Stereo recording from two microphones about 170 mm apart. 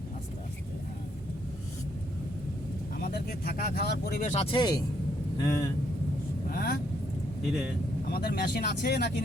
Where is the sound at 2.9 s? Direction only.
60° left (ahead or behind).